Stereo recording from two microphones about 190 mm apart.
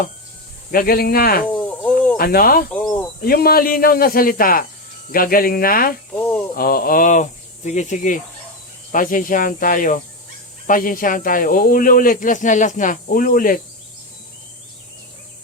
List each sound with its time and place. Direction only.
0.7 s speech: 50° left (ahead or behind)
1.5 s a sound: 10° left (ahead or behind)
2.1 s speech: 50° left (ahead or behind)
2.7 s cricket: 15° left (ahead or behind)
3.2 s speech: 50° left (ahead or behind)
6.1 s snake: 10° left (ahead or behind)
6.6 s speech: 50° left (ahead or behind)